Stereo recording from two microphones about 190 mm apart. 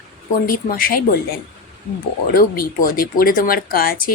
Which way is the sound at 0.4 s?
50° left (ahead or behind).